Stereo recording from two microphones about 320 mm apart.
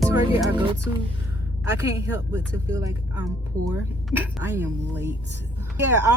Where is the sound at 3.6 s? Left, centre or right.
Right.